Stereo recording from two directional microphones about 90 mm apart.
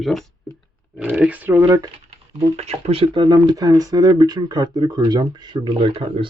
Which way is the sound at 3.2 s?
45° right (ahead or behind).